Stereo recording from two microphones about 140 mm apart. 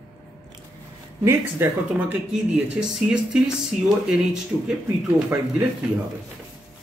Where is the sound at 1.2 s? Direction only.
15° right (ahead or behind).